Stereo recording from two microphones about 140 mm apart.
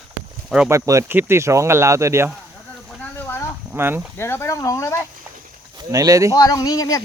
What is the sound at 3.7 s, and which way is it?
Speech, 15° right (ahead or behind).